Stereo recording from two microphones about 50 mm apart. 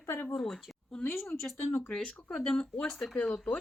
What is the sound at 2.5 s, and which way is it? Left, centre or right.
Speech, centre.